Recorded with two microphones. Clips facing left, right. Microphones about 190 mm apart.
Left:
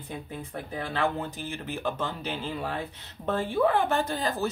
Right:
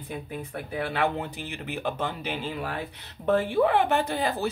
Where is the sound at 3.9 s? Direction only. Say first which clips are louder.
Right 2 dB; 15° right (ahead or behind).